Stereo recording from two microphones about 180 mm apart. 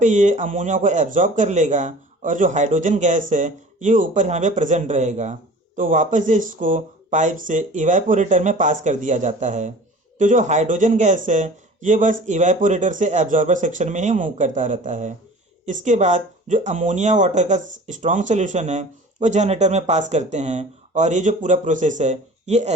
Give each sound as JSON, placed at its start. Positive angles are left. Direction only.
{"t": 0.0, "sound": "speech", "side_deg": -40}